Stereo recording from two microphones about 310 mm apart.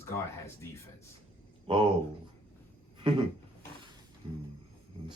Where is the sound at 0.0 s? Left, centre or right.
Centre.